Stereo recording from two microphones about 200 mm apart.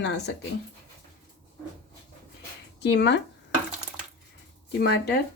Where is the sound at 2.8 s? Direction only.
60° left (ahead or behind).